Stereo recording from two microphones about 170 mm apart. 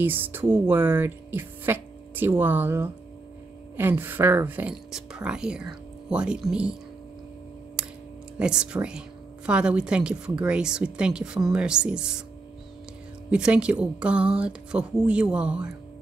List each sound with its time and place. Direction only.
0.0 s speech: 10° right (ahead or behind)
8.4 s speech: 5° right (ahead or behind)
13.3 s speech: 5° right (ahead or behind)